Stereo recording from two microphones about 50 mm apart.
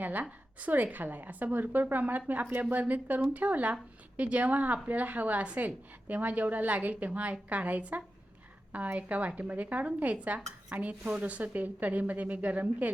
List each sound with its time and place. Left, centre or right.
0.0 s a woman's voice: right